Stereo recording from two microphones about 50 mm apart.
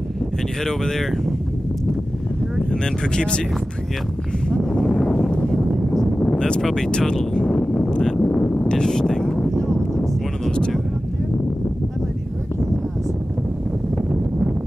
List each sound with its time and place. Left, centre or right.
0.7 s speech: centre
2.7 s speech: centre
4.5 s a sound: centre